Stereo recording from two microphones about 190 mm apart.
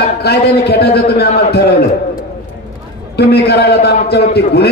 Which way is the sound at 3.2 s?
55° left (ahead or behind).